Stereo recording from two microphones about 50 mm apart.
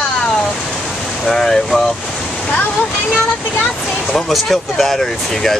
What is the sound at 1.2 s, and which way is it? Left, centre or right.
Speech, centre.